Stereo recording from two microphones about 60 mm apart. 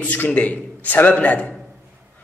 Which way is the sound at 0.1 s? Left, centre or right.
Left.